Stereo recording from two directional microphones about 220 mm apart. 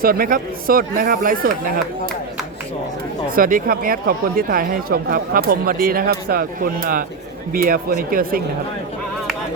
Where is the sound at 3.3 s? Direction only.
40° right (ahead or behind).